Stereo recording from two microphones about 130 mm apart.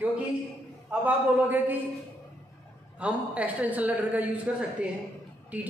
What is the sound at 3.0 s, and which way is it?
A woman's voice, 10° right (ahead or behind).